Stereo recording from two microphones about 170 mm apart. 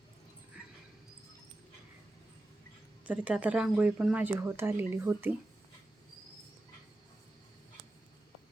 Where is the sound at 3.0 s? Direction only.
10° right (ahead or behind).